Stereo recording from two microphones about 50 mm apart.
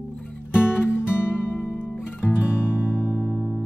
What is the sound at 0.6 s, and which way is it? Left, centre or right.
Music, left.